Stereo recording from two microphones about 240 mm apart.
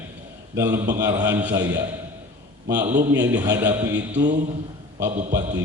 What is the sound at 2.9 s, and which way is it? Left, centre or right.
Speech, right.